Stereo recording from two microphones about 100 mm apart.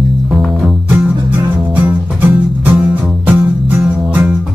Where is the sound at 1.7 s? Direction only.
15° right (ahead or behind).